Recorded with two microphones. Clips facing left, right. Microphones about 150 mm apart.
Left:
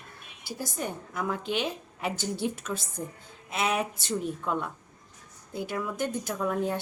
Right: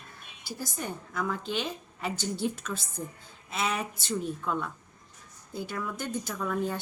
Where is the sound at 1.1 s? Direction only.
10° left (ahead or behind).